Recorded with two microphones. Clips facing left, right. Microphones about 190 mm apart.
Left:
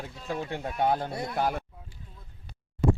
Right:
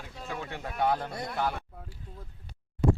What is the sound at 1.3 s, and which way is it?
Speech, 40° left (ahead or behind).